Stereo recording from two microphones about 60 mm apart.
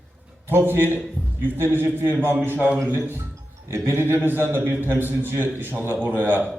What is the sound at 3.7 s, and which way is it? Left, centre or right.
A man's voice, right.